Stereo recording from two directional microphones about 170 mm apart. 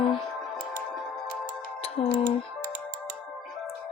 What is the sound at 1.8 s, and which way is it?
Music, 35° left (ahead or behind).